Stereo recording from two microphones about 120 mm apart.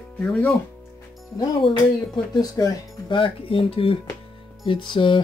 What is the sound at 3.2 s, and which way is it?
Speech, 50° left (ahead or behind).